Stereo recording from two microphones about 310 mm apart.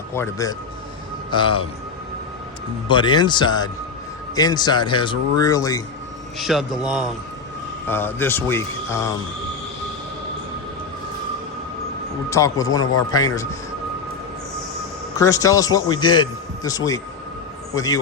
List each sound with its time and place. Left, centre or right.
0.1 s speech: centre
2.8 s speech: centre
6.4 s a man's voice: centre
12.3 s speech: centre
15.1 s a man's voice: centre